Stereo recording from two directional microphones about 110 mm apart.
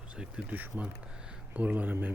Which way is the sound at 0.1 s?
10° right (ahead or behind).